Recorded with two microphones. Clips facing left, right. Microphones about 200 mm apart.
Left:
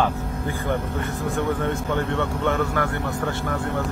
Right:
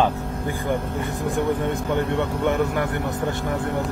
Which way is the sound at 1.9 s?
15° right (ahead or behind).